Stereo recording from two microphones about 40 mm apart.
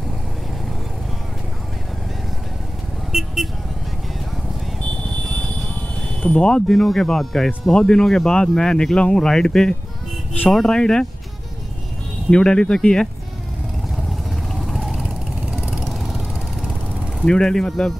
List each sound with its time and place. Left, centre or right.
3.1 s vehicle: centre
6.2 s speech: left
6.7 s speech: centre
7.7 s speech: centre
12.3 s speech: left
14.5 s vehicle: centre
14.9 s vehicle: centre
15.8 s vehicle: centre
17.2 s speech: centre